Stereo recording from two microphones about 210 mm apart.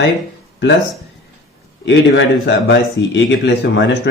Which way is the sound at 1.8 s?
55° left (ahead or behind).